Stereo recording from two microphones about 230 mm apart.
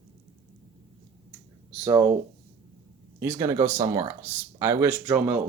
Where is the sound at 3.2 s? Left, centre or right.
Centre.